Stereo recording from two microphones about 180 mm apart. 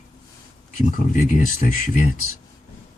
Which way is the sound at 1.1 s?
50° left (ahead or behind).